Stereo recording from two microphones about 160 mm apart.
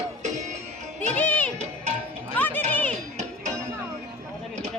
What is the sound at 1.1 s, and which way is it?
Music, 10° left (ahead or behind).